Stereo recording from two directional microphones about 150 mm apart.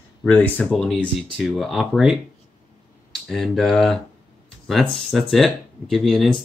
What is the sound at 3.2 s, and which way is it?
Speech, centre (ahead or behind).